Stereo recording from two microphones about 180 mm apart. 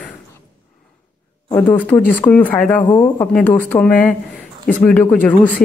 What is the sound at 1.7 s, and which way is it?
Speech, 10° left (ahead or behind).